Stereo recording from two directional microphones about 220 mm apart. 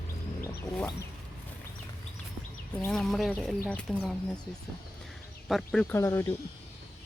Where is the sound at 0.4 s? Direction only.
15° left (ahead or behind).